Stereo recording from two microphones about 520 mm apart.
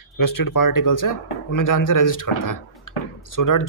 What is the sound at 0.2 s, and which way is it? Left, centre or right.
A man's voice, left.